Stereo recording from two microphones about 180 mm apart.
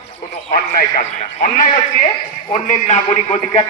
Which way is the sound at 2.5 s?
40° left (ahead or behind).